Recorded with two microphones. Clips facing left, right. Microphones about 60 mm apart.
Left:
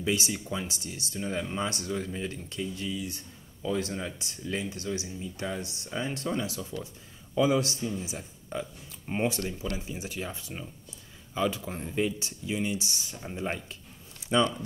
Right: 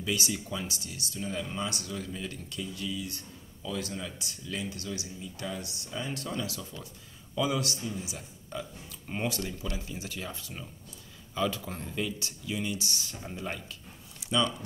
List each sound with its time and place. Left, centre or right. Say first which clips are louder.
0.0 s a man's voice: left 2 dB; left